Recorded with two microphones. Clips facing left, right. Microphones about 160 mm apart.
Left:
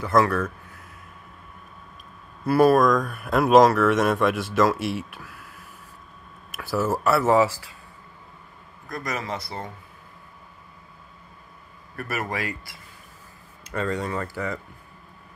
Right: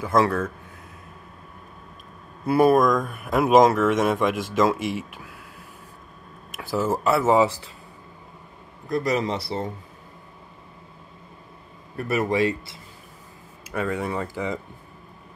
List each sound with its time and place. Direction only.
0.0 s speech: 20° right (ahead or behind)
2.4 s speech: 20° right (ahead or behind)
6.8 s speech: 15° right (ahead or behind)
8.8 s speech: 30° right (ahead or behind)
11.9 s speech: 25° right (ahead or behind)
13.7 s speech: 10° right (ahead or behind)